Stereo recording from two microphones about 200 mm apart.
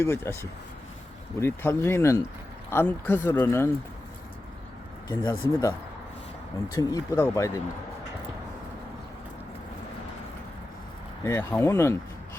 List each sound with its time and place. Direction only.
0.0 s speech: 10° left (ahead or behind)
1.4 s speech: 10° left (ahead or behind)
5.0 s speech: 20° left (ahead or behind)
6.7 s speech: 15° left (ahead or behind)
11.2 s speech: 15° left (ahead or behind)